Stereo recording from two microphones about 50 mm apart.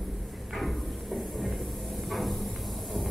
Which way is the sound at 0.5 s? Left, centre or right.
Centre.